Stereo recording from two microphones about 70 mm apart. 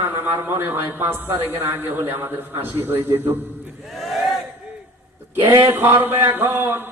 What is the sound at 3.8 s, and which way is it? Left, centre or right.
Battle cry, centre.